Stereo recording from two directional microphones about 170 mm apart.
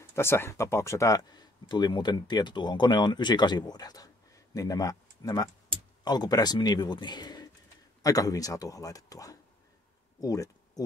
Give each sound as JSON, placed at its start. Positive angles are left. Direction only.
{"t": 0.1, "sound": "speech", "side_deg": 15}